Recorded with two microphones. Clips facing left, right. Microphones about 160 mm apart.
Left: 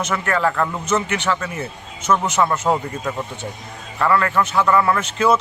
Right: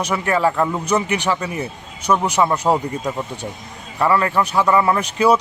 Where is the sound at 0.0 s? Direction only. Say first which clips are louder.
Right 2 dB; 10° right (ahead or behind).